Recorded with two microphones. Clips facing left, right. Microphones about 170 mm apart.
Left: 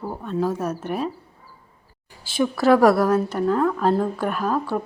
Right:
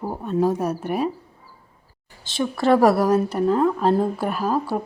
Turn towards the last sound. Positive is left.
turn(degrees=-10)  # may be behind; listen again after turning